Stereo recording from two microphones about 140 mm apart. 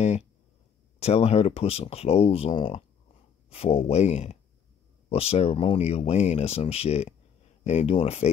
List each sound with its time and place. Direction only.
0.9 s speech: 45° left (ahead or behind)